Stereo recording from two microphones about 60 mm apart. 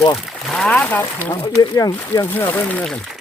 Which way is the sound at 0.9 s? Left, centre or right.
Left.